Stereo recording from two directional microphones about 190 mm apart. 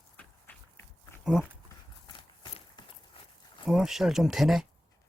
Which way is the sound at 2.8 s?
25° left (ahead or behind).